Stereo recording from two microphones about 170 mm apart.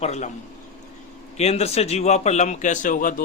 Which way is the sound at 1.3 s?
40° left (ahead or behind).